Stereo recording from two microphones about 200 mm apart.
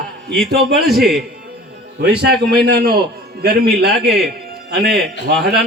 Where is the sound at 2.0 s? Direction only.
55° right (ahead or behind).